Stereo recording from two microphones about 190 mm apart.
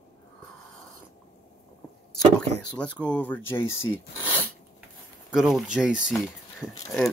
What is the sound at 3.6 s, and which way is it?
Speech, 90° left.